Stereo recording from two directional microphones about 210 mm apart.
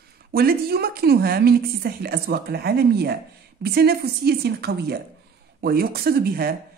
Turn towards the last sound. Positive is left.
turn(degrees=-45)  # may be behind; listen again after turning